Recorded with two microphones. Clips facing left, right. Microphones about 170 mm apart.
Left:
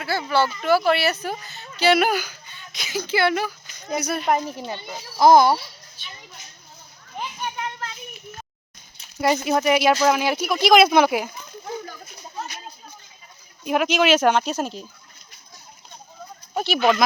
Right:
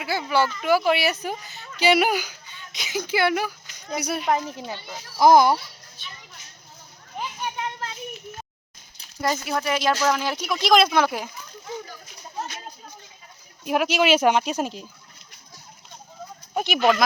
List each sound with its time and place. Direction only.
0.0 s a sound: 15° right (ahead or behind)
0.9 s speech: 15° right (ahead or behind)
4.4 s speech: centre (ahead or behind)
5.2 s speech: 10° right (ahead or behind)
6.0 s speech: centre (ahead or behind)
7.2 s children playing: 10° right (ahead or behind)
7.6 s children playing: 25° right (ahead or behind)
9.2 s speech: 15° left (ahead or behind)
10.9 s speech: 15° left (ahead or behind)
13.7 s speech: 5° right (ahead or behind)
16.6 s speech: 15° right (ahead or behind)